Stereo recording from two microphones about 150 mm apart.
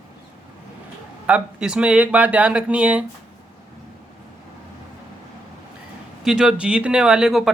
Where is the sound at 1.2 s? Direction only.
5° right (ahead or behind).